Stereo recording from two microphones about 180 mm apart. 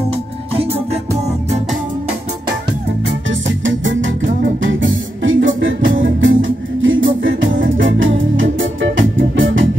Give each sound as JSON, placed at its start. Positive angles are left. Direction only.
{"t": 3.3, "sound": "music", "side_deg": -90}